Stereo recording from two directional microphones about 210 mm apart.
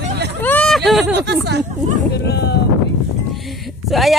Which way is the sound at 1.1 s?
55° right (ahead or behind).